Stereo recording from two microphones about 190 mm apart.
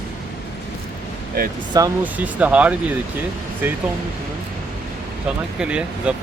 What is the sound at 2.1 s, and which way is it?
Speech, 10° right (ahead or behind).